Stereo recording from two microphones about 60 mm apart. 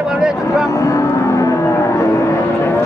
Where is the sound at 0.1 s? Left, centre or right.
Centre.